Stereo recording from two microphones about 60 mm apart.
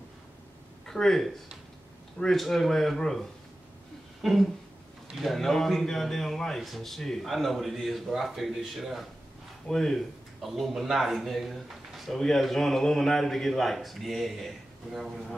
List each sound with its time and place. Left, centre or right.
0.8 s speech: centre